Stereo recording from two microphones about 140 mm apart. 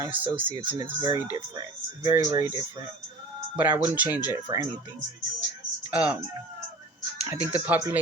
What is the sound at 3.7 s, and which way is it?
Speech, 10° right (ahead or behind).